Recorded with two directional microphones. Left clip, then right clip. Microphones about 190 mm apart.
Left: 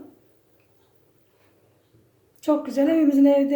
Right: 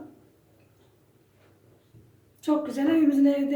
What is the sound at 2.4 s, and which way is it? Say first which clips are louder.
Speech: left 5 dB; 45° left (ahead or behind).